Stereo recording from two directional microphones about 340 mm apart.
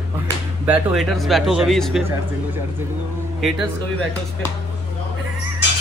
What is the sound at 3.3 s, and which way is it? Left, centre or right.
Speech, centre.